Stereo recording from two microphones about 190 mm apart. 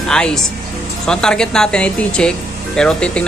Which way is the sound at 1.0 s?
5° left (ahead or behind).